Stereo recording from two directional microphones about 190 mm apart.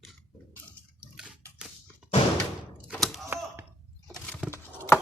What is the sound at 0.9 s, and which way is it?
Bathtub, 5° right (ahead or behind).